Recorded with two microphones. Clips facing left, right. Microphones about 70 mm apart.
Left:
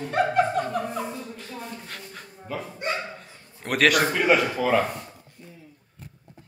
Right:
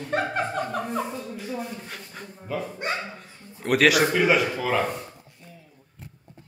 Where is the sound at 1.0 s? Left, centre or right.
Centre.